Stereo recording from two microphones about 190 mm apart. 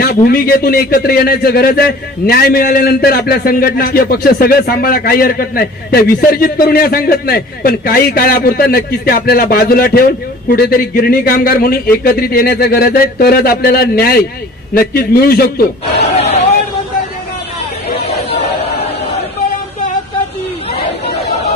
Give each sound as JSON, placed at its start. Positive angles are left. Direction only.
{"t": 0.0, "sound": "a man's voice", "side_deg": 55}